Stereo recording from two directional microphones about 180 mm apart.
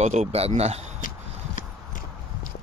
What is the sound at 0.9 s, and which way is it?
Clip-clop, 50° left (ahead or behind).